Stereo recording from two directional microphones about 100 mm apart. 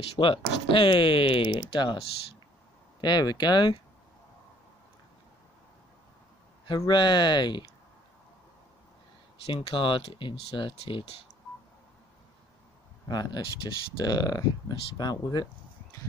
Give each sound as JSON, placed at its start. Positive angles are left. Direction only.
{"t": 0.1, "sound": "speech", "side_deg": 60}
{"t": 3.0, "sound": "speech", "side_deg": 45}
{"t": 6.9, "sound": "speech", "side_deg": 50}
{"t": 9.5, "sound": "speech", "side_deg": 70}
{"t": 13.1, "sound": "speech", "side_deg": 45}
{"t": 14.0, "sound": "speech", "side_deg": 40}